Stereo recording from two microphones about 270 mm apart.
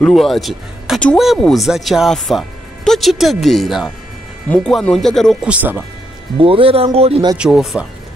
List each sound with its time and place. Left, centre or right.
0.0 s speech: centre
6.3 s speech: centre
7.3 s speech: centre